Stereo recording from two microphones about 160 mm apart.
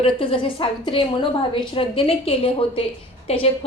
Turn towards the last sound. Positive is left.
turn(degrees=40)  # may be behind; listen again after turning